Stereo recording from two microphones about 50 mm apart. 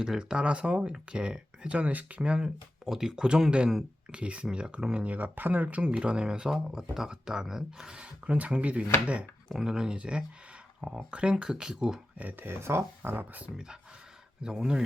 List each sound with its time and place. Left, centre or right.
0.0 s speech: centre
5.0 s speech: right
5.6 s speech: right
8.3 s speech: right
9.6 s speech: centre
12.2 s speech: right
12.5 s speech: right
13.1 s speech: right
13.4 s speech: centre